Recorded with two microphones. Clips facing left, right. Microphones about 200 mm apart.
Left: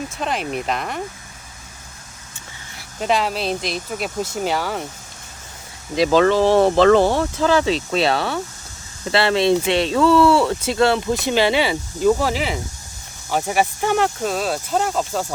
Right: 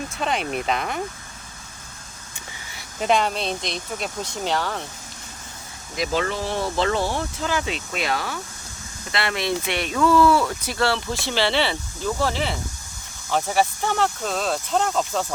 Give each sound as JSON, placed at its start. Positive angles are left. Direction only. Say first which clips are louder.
{"t": 0.1, "sound": "speech", "louder": "left 1 dB", "side_deg": 0}
{"t": 2.7, "sound": "speech", "louder": "even", "side_deg": 0}
{"t": 6.2, "sound": "speech", "louder": "left 12 dB", "side_deg": 70}
{"t": 7.6, "sound": "speech", "louder": "left 9 dB", "side_deg": 30}